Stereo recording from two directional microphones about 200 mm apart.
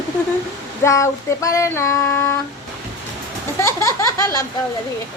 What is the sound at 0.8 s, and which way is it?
Child singing, 15° left (ahead or behind).